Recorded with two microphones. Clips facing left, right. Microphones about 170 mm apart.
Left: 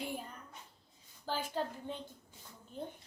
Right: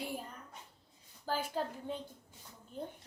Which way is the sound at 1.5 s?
5° right (ahead or behind).